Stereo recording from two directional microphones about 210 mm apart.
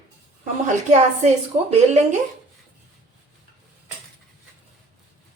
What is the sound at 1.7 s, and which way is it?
Speech, 35° right (ahead or behind).